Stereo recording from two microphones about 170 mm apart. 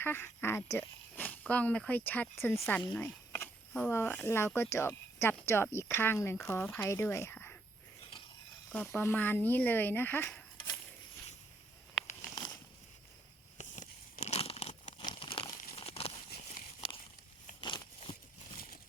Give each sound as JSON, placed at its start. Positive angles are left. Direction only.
{"t": 0.0, "sound": "speech", "side_deg": 10}
{"t": 8.7, "sound": "speech", "side_deg": 10}
{"t": 12.0, "sound": "crumpling", "side_deg": 0}
{"t": 13.6, "sound": "crunch", "side_deg": 40}
{"t": 15.0, "sound": "crumpling", "side_deg": 30}
{"t": 16.5, "sound": "a sound", "side_deg": 40}
{"t": 17.6, "sound": "a sound", "side_deg": 25}